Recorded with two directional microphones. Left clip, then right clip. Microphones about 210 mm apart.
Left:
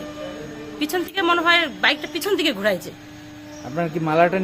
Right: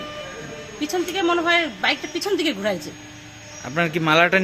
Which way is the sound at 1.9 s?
25° left (ahead or behind).